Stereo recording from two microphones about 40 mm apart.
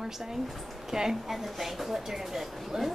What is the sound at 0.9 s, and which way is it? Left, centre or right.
Speech, centre.